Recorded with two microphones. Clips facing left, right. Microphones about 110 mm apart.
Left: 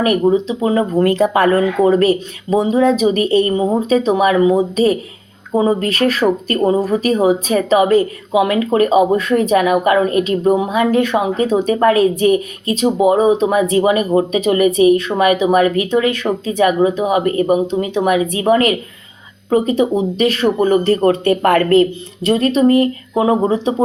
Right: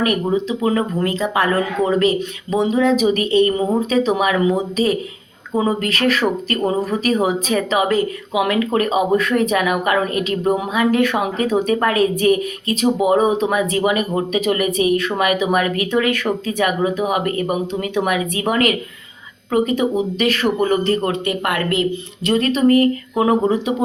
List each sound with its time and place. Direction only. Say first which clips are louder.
0.0 s speech: left 5 dB; 35° left (ahead or behind)
1.8 s speech: left 6 dB; 5° left (ahead or behind)
2.5 s speech: left 3 dB; 35° left (ahead or behind)
5.5 s speech: left 4 dB; 30° left (ahead or behind)